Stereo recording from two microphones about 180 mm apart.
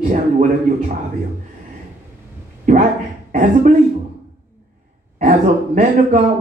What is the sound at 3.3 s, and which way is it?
Speech, 45° right (ahead or behind).